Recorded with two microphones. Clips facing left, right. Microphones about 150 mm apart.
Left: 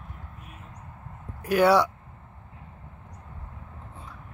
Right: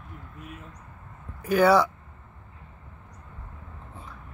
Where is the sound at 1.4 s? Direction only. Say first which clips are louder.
Even; centre (ahead or behind).